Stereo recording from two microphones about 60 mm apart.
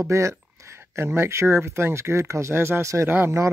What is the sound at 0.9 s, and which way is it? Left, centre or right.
Speech, right.